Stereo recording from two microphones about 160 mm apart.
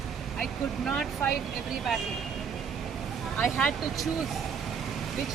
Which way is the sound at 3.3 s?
5° left (ahead or behind).